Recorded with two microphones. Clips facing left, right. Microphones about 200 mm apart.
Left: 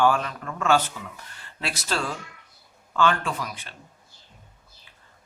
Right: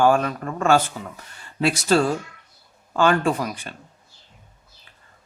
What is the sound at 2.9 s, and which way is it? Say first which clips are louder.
Speech: right 5 dB; 50° right (ahead or behind).